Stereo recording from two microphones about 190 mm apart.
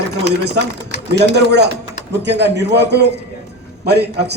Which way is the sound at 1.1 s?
60° right (ahead or behind).